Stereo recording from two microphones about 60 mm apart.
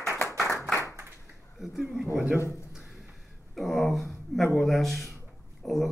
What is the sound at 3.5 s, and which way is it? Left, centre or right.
Speech, centre.